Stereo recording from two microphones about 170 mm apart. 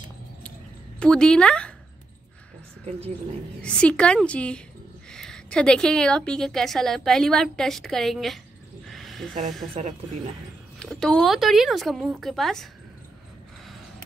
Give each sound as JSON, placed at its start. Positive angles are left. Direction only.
{"t": 0.9, "sound": "a woman's voice", "side_deg": 5}
{"t": 3.6, "sound": "a woman's voice", "side_deg": 5}
{"t": 8.8, "sound": "a sound", "side_deg": 0}
{"t": 9.8, "sound": "speech", "side_deg": -40}
{"t": 10.8, "sound": "a woman's voice", "side_deg": 5}